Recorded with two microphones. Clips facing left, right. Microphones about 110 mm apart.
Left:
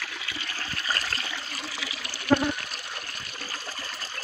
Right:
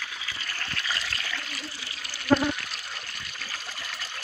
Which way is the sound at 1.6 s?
90° left.